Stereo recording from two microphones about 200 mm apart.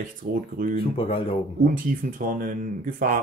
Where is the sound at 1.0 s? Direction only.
25° left (ahead or behind).